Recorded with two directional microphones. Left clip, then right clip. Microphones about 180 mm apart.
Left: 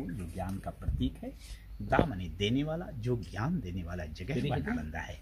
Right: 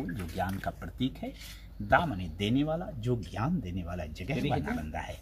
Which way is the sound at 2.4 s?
5° left (ahead or behind).